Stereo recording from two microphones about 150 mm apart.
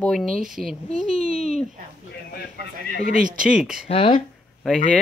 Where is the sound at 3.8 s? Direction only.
40° left (ahead or behind).